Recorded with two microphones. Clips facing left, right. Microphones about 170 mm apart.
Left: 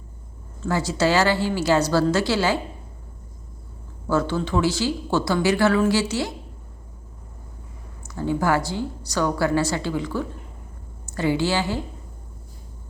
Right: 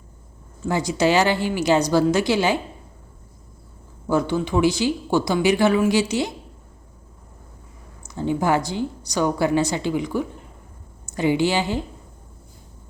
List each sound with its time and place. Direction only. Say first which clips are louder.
0.6 s speech: right 1 dB; 15° right (ahead or behind)
4.0 s speech: right 1 dB; 15° right (ahead or behind)
8.0 s a woman's voice: right 1 dB; 20° right (ahead or behind)